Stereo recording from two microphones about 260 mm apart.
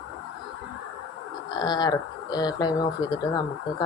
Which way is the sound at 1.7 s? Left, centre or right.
Centre.